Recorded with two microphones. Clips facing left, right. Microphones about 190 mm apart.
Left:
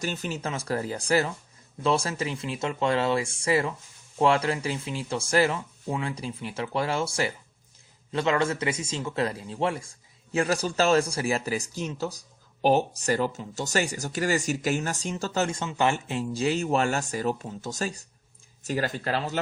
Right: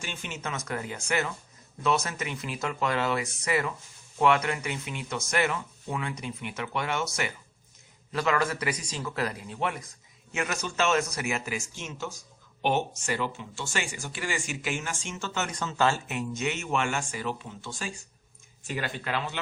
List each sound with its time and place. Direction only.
0.0 s speech: 40° left (ahead or behind)
15.4 s speech: 25° left (ahead or behind)